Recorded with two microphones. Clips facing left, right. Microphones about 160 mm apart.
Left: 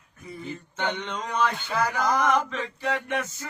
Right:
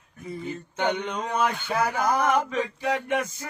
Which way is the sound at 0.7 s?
10° right (ahead or behind).